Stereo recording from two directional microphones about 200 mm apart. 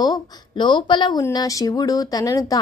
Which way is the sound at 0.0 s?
20° left (ahead or behind).